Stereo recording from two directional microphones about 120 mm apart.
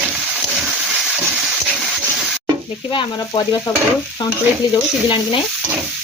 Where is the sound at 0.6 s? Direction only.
Centre (ahead or behind).